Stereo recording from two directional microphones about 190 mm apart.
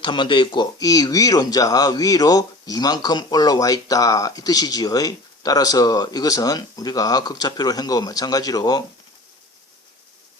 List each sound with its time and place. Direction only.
0.0 s speech: 25° left (ahead or behind)